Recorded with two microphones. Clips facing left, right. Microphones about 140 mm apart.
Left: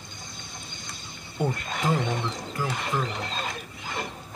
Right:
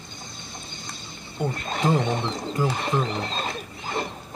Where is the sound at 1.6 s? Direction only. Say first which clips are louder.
Right 4 dB; 30° right (ahead or behind).